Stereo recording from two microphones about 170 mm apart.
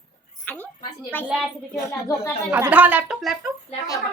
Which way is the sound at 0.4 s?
10° left (ahead or behind).